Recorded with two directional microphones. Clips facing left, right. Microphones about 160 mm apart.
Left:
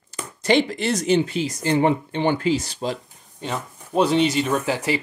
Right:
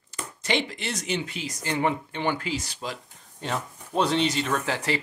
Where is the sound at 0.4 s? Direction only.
40° left (ahead or behind).